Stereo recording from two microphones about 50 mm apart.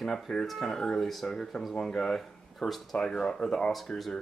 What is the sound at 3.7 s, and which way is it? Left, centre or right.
Speech, centre.